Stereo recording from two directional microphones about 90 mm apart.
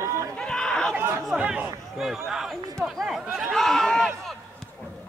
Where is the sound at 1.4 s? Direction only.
15° right (ahead or behind).